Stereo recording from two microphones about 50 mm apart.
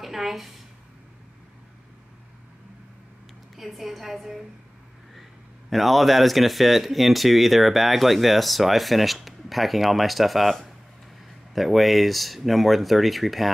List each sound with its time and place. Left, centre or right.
0.0 s a woman's voice: centre
3.5 s speech: centre
5.7 s speech: centre